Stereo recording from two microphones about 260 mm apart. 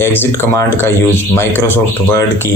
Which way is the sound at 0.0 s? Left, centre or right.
Centre.